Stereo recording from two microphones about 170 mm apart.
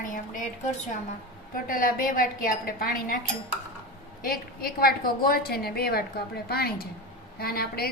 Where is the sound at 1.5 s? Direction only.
55° left (ahead or behind).